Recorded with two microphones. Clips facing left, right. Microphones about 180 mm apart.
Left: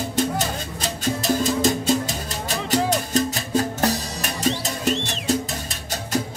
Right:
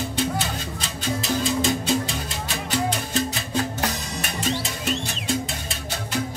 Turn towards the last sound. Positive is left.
turn(degrees=40)  # may be behind; listen again after turning